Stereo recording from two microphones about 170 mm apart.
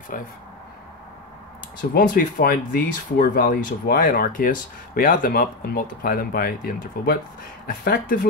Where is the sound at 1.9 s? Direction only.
60° left (ahead or behind).